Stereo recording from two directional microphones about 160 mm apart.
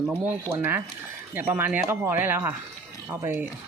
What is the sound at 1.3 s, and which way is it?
Speech, 10° right (ahead or behind).